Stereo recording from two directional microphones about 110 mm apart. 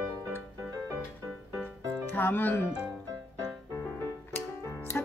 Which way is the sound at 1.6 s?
15° left (ahead or behind).